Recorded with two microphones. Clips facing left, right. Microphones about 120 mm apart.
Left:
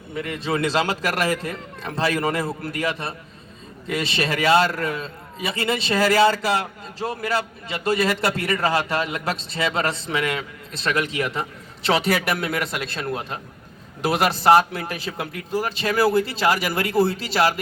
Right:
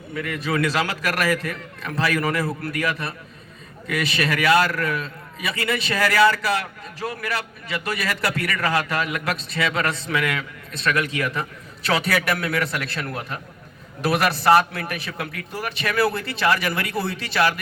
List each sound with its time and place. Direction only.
0.1 s a man's voice: 25° left (ahead or behind)
16.9 s a man's voice: 40° left (ahead or behind)